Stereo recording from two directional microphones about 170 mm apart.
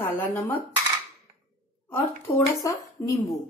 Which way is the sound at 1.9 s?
15° left (ahead or behind).